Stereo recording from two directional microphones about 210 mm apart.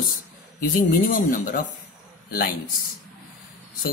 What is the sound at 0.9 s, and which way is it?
Speech, 40° left (ahead or behind).